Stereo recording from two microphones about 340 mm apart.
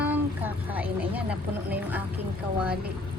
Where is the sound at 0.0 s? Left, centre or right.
Centre.